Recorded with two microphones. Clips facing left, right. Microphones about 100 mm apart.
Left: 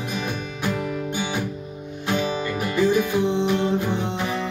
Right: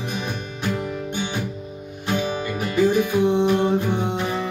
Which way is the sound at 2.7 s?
15° right (ahead or behind).